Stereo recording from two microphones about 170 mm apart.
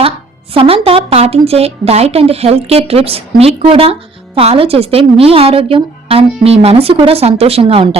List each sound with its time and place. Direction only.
0.5 s a woman's voice: 35° right (ahead or behind)